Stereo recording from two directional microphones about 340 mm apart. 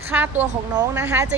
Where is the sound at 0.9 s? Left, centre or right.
Centre.